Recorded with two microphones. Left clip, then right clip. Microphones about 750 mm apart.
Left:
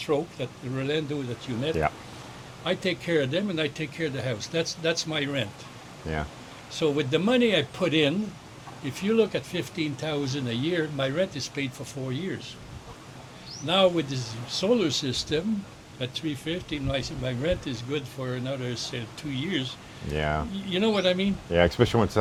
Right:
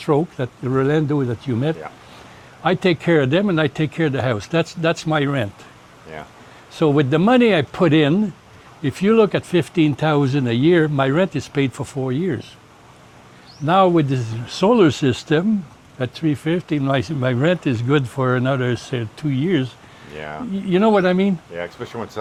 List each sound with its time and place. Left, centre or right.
0.0 s speech: right
2.6 s speech: right
6.1 s speech: left
6.7 s speech: right
13.7 s speech: right
20.1 s speech: left
20.7 s speech: right
21.5 s speech: left